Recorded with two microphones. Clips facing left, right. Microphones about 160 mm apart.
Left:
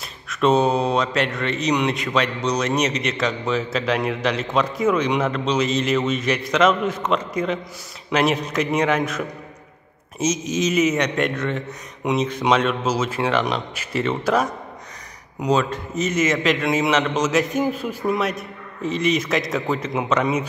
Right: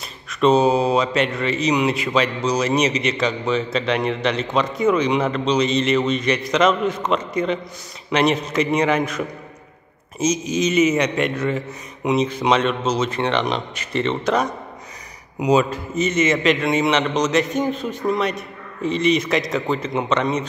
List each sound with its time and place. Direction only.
0.3 s a man's voice: centre (ahead or behind)
15.3 s a man's voice: 10° right (ahead or behind)